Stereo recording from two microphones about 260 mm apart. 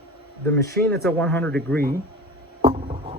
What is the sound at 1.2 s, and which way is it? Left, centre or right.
Speech, centre.